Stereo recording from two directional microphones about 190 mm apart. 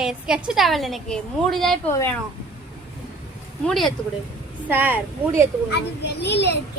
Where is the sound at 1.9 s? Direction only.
15° left (ahead or behind).